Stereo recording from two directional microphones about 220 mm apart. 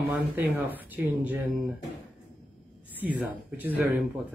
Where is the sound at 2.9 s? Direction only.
5° right (ahead or behind).